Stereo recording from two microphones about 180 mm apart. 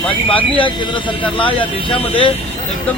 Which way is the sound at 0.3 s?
30° left (ahead or behind).